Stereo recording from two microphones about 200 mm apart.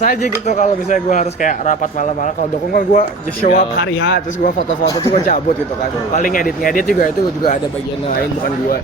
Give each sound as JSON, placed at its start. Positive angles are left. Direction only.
{"t": 0.0, "sound": "speech", "side_deg": 40}
{"t": 3.8, "sound": "a man's voice", "side_deg": 60}
{"t": 5.1, "sound": "speech", "side_deg": 40}